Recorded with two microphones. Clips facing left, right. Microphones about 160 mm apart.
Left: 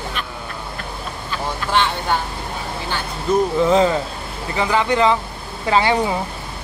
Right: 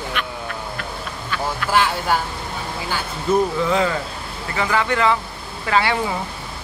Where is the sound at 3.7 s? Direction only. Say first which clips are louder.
Left 4 dB; 25° left (ahead or behind).